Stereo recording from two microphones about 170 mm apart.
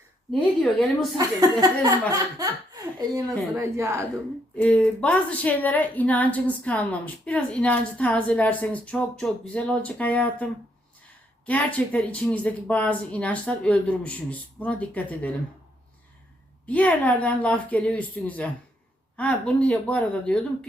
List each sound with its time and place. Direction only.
0.3 s a woman's voice: 5° left (ahead or behind)
1.1 s a woman's voice: 20° right (ahead or behind)
4.5 s a woman's voice: 10° left (ahead or behind)
16.6 s a woman's voice: 10° left (ahead or behind)